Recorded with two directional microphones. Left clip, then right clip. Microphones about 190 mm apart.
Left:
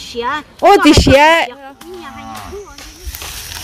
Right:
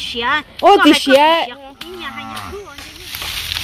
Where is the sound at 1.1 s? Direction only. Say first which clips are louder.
Left 3 dB; 15° left (ahead or behind).